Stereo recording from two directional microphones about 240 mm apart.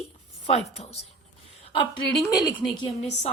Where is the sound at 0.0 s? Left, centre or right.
Left.